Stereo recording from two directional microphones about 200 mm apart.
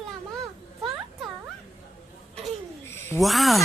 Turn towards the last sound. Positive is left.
turn(degrees=0)  # may be behind; listen again after turning